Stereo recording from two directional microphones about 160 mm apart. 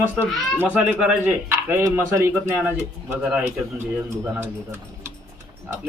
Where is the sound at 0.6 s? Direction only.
10° right (ahead or behind).